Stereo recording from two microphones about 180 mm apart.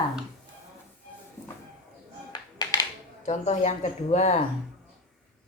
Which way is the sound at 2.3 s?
20° left (ahead or behind).